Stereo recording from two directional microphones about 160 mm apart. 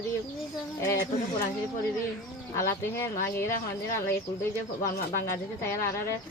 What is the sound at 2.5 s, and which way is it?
Speech, 15° left (ahead or behind).